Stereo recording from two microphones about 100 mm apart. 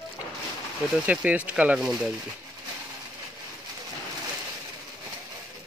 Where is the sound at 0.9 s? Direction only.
10° right (ahead or behind).